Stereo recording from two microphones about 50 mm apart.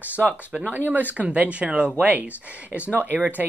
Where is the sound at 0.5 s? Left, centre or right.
Right.